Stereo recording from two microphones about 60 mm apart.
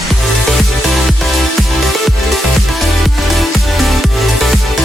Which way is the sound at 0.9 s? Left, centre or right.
Centre.